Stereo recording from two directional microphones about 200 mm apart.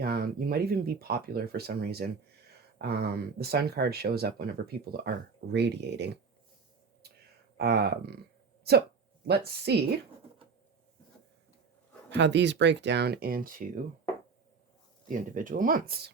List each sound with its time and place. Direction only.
0.0 s speech: 50° right (ahead or behind)
7.5 s speech: 55° right (ahead or behind)
12.1 s speech: 60° right (ahead or behind); by 13.8 s 40° right (ahead or behind)
15.1 s speech: 40° right (ahead or behind)